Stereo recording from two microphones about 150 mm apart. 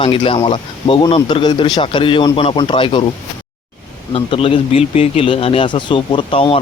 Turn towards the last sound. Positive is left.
turn(degrees=35)  # may be behind; listen again after turning